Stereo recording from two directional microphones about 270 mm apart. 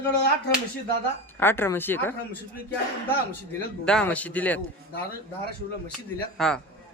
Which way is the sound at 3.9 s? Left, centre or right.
Centre.